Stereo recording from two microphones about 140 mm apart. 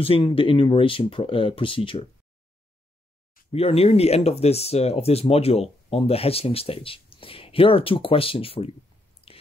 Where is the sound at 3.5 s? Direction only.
45° left (ahead or behind).